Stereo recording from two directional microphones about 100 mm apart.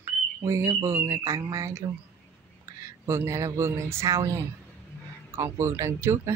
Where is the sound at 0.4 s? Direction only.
30° right (ahead or behind).